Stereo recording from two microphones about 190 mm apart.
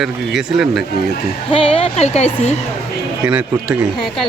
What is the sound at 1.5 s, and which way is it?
Speech, 25° left (ahead or behind).